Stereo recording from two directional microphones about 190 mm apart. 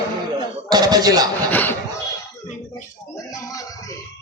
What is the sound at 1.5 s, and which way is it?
Speech, 10° left (ahead or behind).